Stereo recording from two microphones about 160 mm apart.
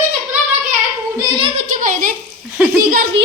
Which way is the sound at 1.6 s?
55° right (ahead or behind).